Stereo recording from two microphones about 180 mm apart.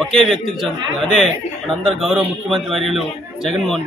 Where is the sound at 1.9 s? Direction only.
5° right (ahead or behind).